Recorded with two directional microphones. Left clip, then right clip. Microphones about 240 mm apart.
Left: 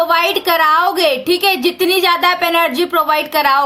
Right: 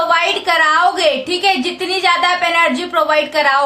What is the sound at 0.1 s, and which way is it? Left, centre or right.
A woman's voice, left.